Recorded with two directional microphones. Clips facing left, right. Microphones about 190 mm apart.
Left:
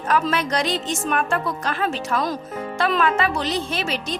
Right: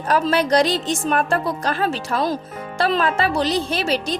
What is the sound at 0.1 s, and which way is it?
Speech, 35° right (ahead or behind).